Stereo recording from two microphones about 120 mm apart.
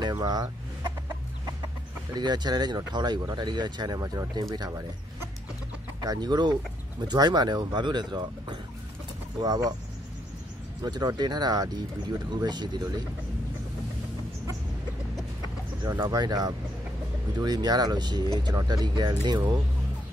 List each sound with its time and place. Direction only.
0.0 s chicken: 35° right (ahead or behind)
2.1 s speech: 35° right (ahead or behind)
4.0 s speech: 25° right (ahead or behind)
5.9 s speech: 35° right (ahead or behind)
10.8 s speech: 35° right (ahead or behind)
16.1 s speech: 30° right (ahead or behind)